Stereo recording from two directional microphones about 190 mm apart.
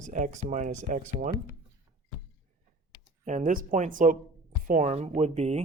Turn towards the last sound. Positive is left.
turn(degrees=-35)  # may be behind; listen again after turning